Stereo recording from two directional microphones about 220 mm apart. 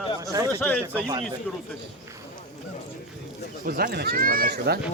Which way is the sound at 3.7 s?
45° right (ahead or behind).